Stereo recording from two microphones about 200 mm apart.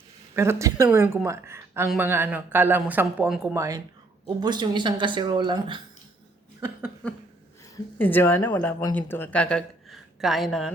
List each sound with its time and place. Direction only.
0.3 s speech: 15° right (ahead or behind)
7.0 s a sound: 5° left (ahead or behind)
7.9 s speech: 10° left (ahead or behind)